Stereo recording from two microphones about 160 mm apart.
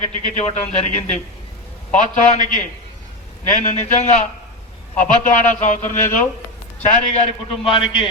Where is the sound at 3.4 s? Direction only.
45° left (ahead or behind).